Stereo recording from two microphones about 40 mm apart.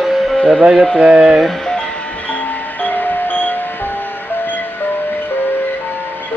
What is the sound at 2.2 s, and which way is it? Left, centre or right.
Music, left.